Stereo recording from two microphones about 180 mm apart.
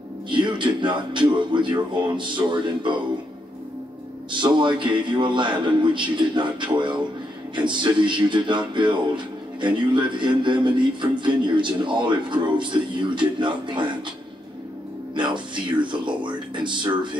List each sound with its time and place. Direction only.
0.3 s speech: 25° right (ahead or behind)
4.3 s speech: 25° right (ahead or behind)
15.1 s speech: 25° right (ahead or behind)